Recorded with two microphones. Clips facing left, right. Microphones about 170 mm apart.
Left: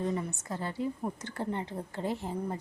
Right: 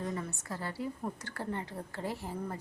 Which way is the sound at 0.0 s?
20° left (ahead or behind).